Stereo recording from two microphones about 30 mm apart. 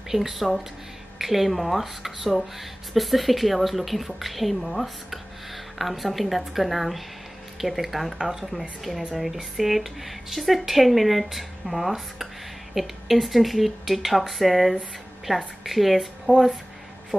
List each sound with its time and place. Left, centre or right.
0.1 s a woman's voice: centre
8.2 s speech: centre
8.5 s a woman's voice: centre
17.1 s speech: right